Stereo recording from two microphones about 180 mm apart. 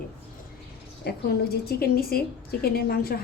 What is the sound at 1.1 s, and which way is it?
A woman's voice, 60° left (ahead or behind).